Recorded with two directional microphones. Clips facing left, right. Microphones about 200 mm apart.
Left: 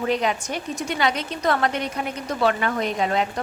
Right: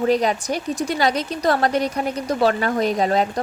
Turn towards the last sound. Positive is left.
turn(degrees=-35)  # may be behind; listen again after turning